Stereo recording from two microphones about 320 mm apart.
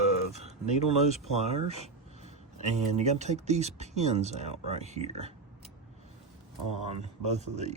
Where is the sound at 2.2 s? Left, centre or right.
Right.